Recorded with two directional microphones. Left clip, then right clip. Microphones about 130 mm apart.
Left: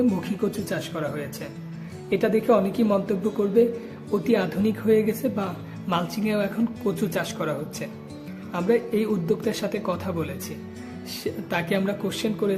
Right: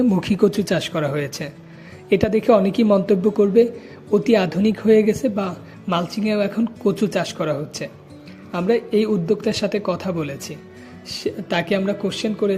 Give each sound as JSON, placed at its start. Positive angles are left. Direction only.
{"t": 0.2, "sound": "speech", "side_deg": -50}